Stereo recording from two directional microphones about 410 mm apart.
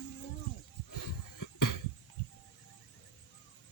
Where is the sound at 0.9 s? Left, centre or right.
Left.